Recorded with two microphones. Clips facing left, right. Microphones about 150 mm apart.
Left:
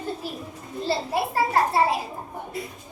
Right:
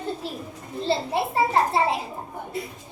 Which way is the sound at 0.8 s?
25° right (ahead or behind).